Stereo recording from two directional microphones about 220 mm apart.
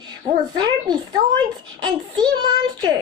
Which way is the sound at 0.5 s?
20° right (ahead or behind).